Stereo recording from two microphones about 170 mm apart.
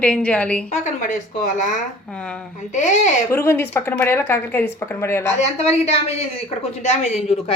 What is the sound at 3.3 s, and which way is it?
Speech, 15° left (ahead or behind).